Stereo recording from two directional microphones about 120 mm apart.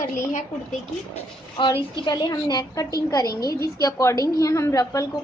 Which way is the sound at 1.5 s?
40° left (ahead or behind).